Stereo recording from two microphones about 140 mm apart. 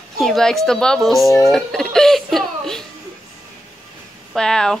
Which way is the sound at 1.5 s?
5° left (ahead or behind).